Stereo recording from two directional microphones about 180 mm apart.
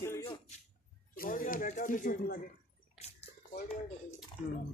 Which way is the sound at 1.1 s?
50° left (ahead or behind).